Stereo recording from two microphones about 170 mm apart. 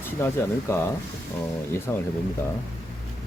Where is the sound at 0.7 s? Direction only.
15° left (ahead or behind).